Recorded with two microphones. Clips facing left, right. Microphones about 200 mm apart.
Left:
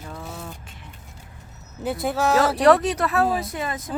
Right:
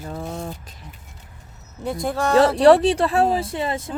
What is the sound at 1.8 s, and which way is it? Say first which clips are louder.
Speech: even; 5° left (ahead or behind).